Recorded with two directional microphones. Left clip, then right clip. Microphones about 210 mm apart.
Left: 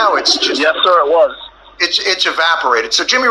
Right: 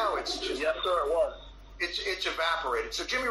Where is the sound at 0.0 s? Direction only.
40° left (ahead or behind).